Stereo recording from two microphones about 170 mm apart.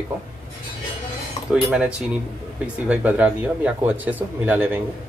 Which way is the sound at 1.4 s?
35° left (ahead or behind).